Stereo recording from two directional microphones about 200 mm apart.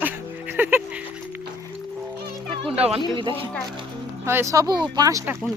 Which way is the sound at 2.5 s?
25° right (ahead or behind).